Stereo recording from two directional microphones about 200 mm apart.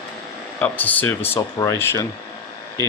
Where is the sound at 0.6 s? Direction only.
10° left (ahead or behind).